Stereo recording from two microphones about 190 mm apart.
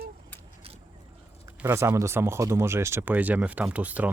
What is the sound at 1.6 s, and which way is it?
Speech, 15° right (ahead or behind).